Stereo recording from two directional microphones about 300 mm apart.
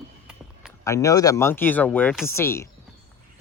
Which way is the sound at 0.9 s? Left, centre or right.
Centre.